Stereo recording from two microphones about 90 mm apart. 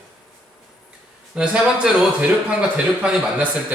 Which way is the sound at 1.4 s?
5° right (ahead or behind).